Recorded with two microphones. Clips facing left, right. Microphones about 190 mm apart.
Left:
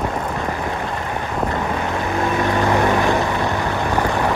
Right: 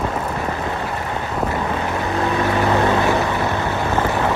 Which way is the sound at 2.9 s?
20° right (ahead or behind).